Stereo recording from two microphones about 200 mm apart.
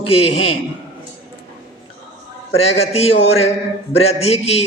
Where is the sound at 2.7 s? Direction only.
30° left (ahead or behind).